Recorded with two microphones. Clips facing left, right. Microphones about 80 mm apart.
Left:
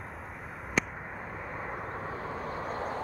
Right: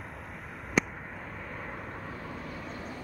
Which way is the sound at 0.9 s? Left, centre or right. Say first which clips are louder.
Left 2 dB; centre.